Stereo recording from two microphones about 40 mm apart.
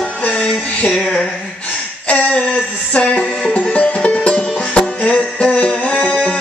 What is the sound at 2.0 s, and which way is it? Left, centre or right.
Music, left.